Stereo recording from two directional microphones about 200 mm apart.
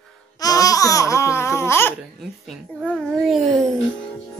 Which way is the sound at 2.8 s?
Centre (ahead or behind).